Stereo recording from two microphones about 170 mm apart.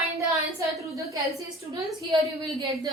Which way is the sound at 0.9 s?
20° right (ahead or behind).